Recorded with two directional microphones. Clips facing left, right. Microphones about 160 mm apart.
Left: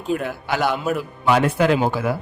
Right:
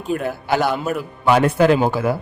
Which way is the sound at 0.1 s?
Centre (ahead or behind).